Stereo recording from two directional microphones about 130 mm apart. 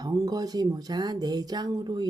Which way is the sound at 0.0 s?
30° right (ahead or behind).